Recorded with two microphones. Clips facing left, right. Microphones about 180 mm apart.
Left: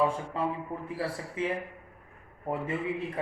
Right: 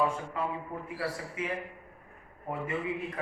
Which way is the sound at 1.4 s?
30° left (ahead or behind).